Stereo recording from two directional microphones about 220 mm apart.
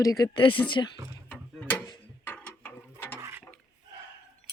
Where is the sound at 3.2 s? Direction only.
10° right (ahead or behind).